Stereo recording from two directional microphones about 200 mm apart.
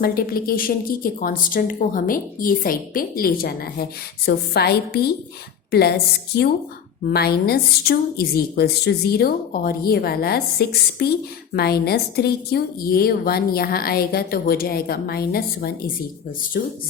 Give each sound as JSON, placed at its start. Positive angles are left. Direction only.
{"t": 0.0, "sound": "a woman's voice", "side_deg": 50}
{"t": 7.1, "sound": "a woman's voice", "side_deg": 50}